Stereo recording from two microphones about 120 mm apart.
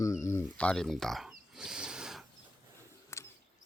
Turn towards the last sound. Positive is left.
turn(degrees=25)  # may be behind; listen again after turning